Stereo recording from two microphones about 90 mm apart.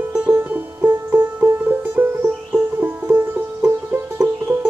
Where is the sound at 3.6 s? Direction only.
30° right (ahead or behind).